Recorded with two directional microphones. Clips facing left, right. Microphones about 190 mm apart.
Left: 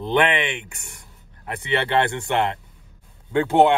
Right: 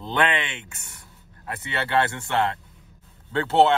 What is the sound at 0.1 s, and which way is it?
Speech, 20° left (ahead or behind).